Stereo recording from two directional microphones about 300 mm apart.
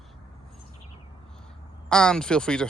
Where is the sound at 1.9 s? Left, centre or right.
Centre.